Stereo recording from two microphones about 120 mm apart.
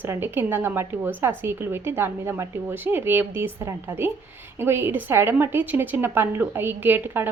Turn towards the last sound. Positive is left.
turn(degrees=-20)  # may be behind; listen again after turning